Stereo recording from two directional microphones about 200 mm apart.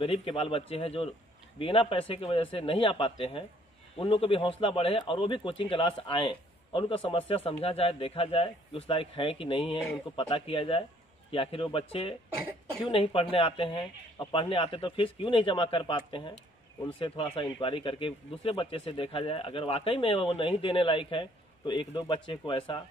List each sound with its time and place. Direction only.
0.0 s speech: 30° left (ahead or behind)